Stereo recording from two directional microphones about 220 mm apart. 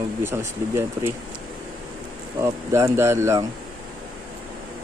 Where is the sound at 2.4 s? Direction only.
15° right (ahead or behind).